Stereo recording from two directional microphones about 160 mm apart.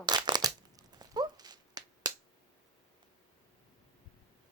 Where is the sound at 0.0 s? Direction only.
25° right (ahead or behind).